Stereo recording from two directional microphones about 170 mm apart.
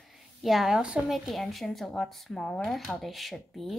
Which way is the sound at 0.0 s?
Centre (ahead or behind).